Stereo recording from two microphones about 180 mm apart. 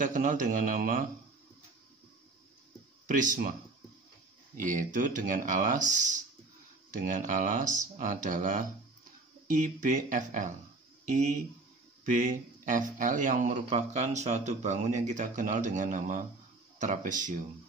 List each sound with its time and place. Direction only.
0.0 s speech: 45° right (ahead or behind)
3.1 s speech: 45° right (ahead or behind)
4.6 s speech: 45° right (ahead or behind)